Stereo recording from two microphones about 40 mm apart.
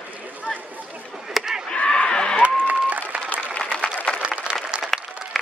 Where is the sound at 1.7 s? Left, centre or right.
Left.